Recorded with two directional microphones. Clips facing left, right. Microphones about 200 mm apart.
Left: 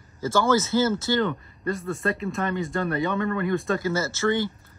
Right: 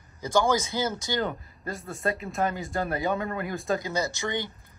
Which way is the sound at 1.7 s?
Centre (ahead or behind).